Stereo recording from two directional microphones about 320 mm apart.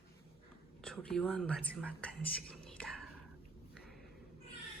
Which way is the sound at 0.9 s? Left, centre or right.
Centre.